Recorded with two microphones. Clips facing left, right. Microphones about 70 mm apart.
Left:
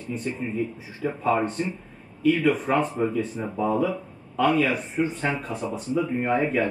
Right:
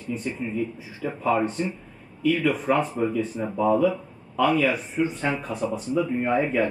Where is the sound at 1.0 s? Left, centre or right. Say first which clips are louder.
Even; left.